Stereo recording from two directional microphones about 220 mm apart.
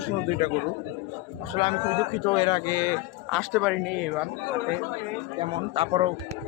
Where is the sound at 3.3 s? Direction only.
Centre (ahead or behind).